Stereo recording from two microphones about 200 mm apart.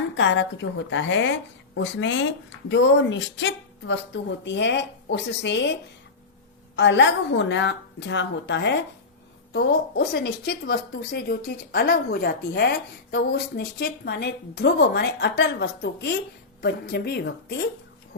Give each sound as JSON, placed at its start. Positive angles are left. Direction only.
{"t": 0.2, "sound": "a woman's voice", "side_deg": 65}
{"t": 6.7, "sound": "a woman's voice", "side_deg": 65}